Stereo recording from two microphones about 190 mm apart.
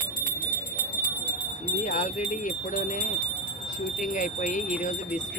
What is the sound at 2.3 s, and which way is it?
Speech, 40° left (ahead or behind).